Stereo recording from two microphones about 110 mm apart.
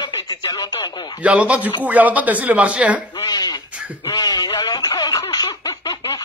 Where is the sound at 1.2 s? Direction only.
10° right (ahead or behind).